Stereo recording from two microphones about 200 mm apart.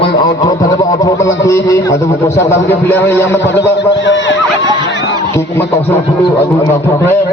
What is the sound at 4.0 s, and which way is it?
Speech, 65° left (ahead or behind).